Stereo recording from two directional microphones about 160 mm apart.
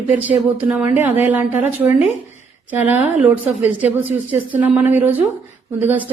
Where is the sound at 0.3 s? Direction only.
10° right (ahead or behind).